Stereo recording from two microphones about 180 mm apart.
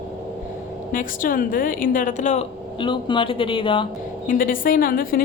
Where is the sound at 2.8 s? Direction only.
25° left (ahead or behind).